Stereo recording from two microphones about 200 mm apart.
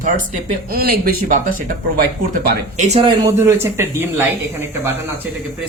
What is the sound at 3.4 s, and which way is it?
A man's voice, 15° right (ahead or behind).